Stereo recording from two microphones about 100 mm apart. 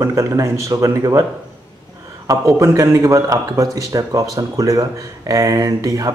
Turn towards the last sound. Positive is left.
turn(degrees=-35)  # may be behind; listen again after turning